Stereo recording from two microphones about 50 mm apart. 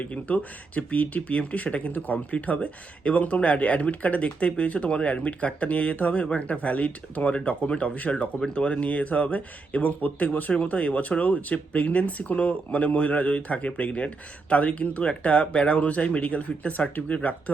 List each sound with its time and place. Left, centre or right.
0.0 s speech: left